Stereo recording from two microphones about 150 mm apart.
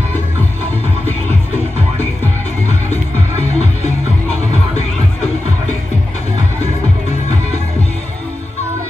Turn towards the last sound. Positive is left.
turn(degrees=50)  # may be behind; listen again after turning